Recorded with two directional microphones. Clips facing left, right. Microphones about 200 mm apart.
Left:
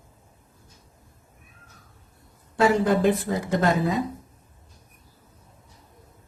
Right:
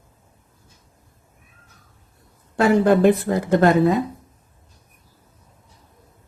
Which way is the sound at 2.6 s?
60° right (ahead or behind).